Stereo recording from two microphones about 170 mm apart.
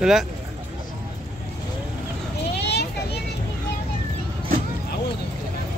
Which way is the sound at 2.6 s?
80° left.